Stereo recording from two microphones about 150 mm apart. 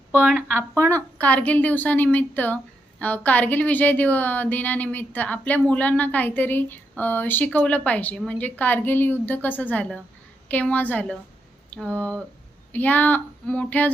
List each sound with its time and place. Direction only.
0.1 s speech: 5° right (ahead or behind)
0.8 s a woman's voice: 20° right (ahead or behind)
1.2 s a woman's voice: 10° left (ahead or behind)